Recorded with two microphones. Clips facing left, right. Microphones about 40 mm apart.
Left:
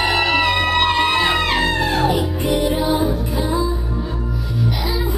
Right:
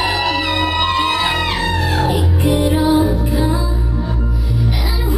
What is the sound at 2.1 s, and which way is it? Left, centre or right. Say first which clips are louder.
Music: right 2 dB; centre.